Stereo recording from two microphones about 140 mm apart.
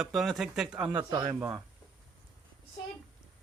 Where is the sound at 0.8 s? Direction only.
30° right (ahead or behind).